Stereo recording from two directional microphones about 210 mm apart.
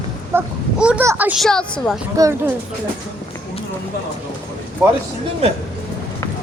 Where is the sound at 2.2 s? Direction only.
15° right (ahead or behind).